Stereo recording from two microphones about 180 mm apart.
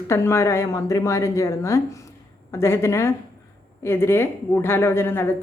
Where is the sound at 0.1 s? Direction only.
15° left (ahead or behind).